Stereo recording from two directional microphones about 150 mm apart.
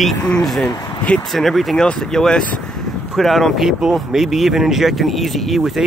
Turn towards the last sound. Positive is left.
turn(degrees=0)  # may be behind; listen again after turning